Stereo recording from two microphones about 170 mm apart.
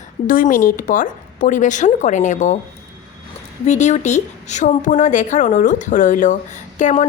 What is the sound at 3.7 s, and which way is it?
Speech, 45° left (ahead or behind).